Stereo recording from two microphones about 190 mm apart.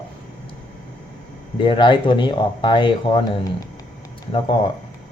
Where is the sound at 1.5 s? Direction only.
25° left (ahead or behind).